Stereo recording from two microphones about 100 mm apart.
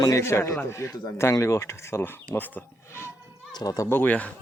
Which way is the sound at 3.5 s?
40° left (ahead or behind).